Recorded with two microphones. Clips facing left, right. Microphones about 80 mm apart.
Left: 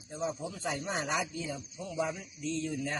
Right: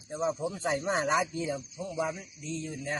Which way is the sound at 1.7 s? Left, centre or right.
Right.